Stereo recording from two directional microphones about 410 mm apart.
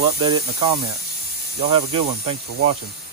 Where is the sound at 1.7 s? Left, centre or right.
Centre.